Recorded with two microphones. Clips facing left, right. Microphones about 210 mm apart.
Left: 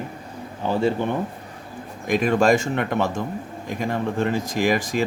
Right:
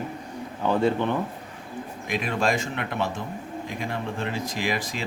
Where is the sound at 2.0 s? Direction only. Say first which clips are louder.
Left 8 dB; 45° left (ahead or behind).